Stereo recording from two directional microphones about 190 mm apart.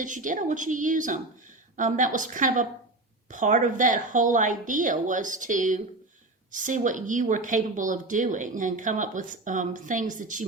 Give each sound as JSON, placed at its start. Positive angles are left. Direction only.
{"t": 0.0, "sound": "a woman's voice", "side_deg": -40}